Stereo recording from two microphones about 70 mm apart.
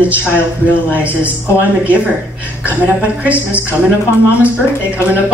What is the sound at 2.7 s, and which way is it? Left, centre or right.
A woman's voice, right.